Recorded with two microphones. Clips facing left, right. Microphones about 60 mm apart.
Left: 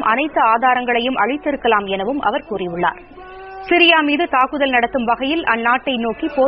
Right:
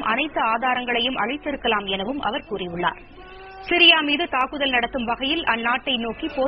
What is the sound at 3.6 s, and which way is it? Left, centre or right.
A woman's voice, left.